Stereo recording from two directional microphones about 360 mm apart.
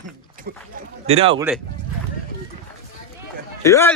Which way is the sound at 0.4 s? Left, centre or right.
Right.